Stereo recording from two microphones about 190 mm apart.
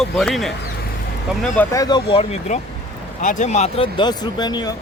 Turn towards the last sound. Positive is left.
turn(degrees=20)  # may be behind; listen again after turning